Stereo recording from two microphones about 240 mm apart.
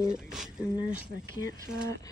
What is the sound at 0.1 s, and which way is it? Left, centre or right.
Speech, centre.